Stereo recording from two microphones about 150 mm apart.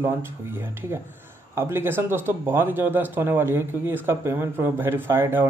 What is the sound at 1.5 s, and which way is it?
Speech, 15° right (ahead or behind).